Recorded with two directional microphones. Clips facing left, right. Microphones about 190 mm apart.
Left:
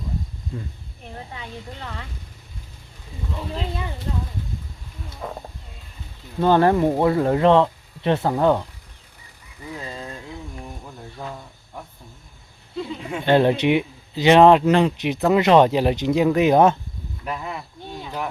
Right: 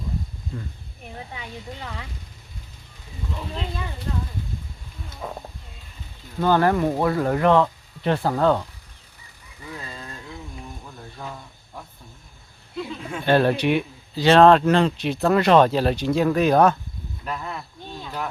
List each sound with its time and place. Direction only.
1.4 s speech: 10° right (ahead or behind)
4.1 s speech: 20° left (ahead or behind)
6.4 s speech: 25° left (ahead or behind)
12.8 s speech: 20° left (ahead or behind)
17.2 s a sound: 15° left (ahead or behind)